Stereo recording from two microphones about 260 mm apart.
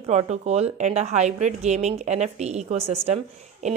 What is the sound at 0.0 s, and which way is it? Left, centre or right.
A woman's voice, right.